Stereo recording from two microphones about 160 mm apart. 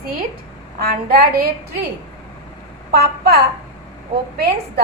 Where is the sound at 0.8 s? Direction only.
65° right (ahead or behind).